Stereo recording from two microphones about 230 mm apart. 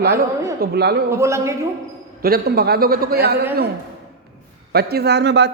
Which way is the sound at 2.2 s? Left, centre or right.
Right.